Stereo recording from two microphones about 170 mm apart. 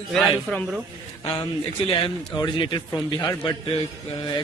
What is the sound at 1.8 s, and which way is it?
A man's voice, 30° left (ahead or behind).